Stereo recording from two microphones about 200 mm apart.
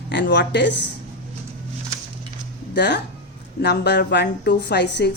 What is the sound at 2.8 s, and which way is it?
Speech, 60° left (ahead or behind).